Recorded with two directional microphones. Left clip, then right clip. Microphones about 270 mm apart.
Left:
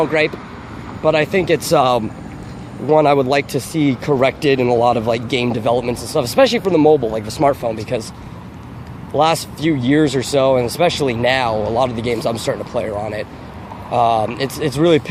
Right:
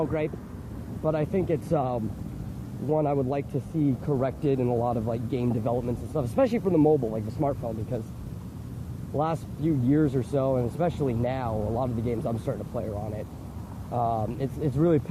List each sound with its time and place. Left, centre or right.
0.0 s speech: centre
7.3 s speech: centre
9.1 s speech: centre